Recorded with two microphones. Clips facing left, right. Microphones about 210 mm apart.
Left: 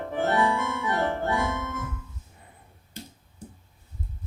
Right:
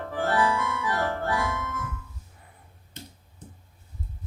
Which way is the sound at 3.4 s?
10° left (ahead or behind).